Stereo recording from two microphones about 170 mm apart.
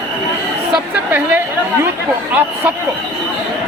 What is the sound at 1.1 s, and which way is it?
Speech, 10° right (ahead or behind).